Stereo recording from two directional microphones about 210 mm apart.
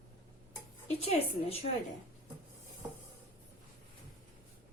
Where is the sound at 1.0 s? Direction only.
30° left (ahead or behind).